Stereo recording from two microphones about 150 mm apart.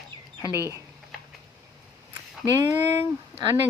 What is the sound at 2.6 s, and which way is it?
Speech, 20° right (ahead or behind).